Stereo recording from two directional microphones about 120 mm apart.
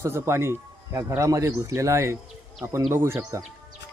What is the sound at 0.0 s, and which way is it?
Speech, 20° right (ahead or behind).